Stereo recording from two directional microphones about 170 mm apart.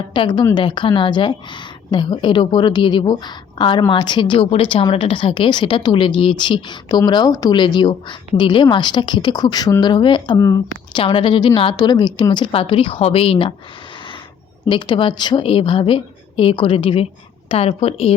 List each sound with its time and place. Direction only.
0.1 s speech: 30° left (ahead or behind)
11.0 s a woman's voice: 30° left (ahead or behind)
14.7 s a woman's voice: 25° left (ahead or behind)